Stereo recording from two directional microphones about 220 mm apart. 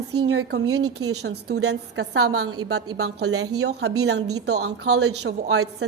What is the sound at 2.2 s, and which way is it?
Speech, 80° right.